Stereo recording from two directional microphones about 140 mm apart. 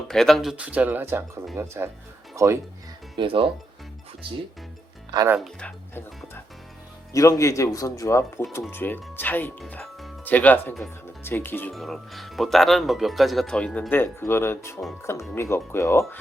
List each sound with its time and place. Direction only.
0.1 s speech: centre (ahead or behind)
0.5 s speech: 10° right (ahead or behind)
3.2 s speech: 40° right (ahead or behind)
5.5 s speech: 15° left (ahead or behind)
11.7 s speech: centre (ahead or behind)
13.9 s speech: 15° left (ahead or behind)